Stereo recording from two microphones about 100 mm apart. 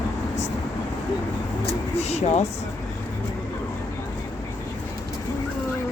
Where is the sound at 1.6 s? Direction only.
90° left.